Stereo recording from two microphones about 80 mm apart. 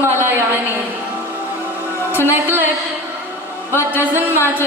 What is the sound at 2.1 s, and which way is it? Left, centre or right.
Speech, right.